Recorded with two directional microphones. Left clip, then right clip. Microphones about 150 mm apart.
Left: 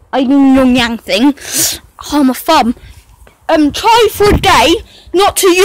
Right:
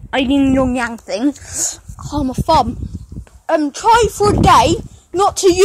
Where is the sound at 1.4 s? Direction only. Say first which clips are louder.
Left 8 dB; 70° left (ahead or behind).